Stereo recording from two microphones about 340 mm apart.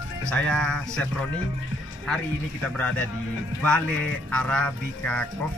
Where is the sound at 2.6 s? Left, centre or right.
Centre.